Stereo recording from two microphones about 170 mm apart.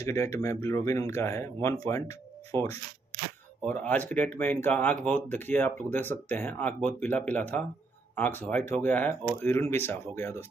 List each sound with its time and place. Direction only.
0.0 s speech: 15° left (ahead or behind)